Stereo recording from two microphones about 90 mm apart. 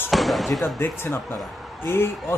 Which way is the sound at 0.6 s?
25° left (ahead or behind).